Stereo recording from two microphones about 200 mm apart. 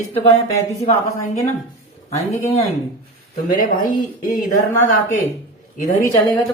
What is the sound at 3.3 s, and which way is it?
Speech, 45° left (ahead or behind).